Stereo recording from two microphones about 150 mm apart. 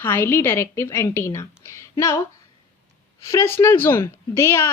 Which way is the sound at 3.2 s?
20° left (ahead or behind).